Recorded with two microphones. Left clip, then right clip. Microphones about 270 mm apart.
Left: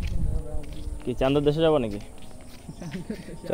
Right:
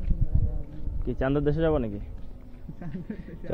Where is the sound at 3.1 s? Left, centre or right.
Centre.